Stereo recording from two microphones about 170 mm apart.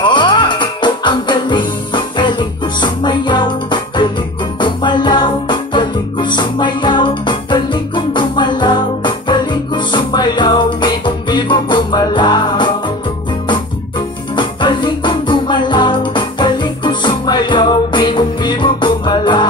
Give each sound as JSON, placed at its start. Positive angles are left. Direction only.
{"t": 0.0, "sound": "music", "side_deg": 25}
{"t": 14.3, "sound": "music", "side_deg": 30}